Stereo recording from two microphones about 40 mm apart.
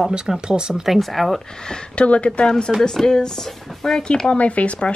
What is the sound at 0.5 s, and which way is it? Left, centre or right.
Speech, centre.